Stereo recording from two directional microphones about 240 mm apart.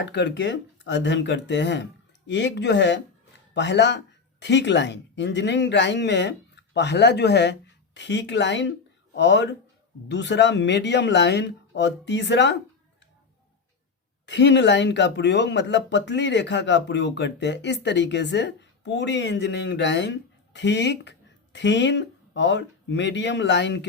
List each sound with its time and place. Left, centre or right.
0.0 s speech: left
14.3 s speech: left